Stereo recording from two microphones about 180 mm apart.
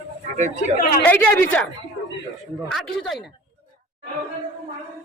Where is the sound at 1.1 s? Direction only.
10° left (ahead or behind).